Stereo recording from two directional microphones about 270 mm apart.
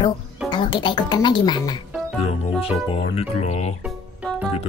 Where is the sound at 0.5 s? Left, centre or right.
Centre.